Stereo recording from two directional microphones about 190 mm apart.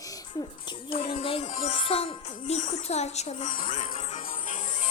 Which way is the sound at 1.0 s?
30° left (ahead or behind).